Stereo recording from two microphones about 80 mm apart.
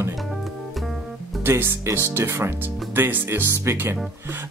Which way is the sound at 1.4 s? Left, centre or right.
Right.